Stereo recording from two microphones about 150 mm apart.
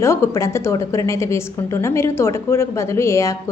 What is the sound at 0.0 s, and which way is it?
A woman's voice, 20° left (ahead or behind).